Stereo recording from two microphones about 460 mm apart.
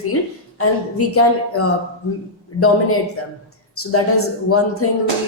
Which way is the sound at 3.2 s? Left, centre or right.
Left.